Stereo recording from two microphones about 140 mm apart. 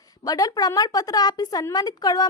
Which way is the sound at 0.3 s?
25° left (ahead or behind).